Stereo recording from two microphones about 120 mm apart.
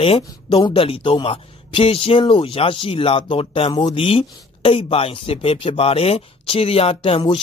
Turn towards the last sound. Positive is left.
turn(degrees=55)  # may be behind; listen again after turning